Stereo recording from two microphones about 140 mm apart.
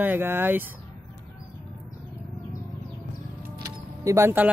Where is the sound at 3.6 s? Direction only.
20° right (ahead or behind).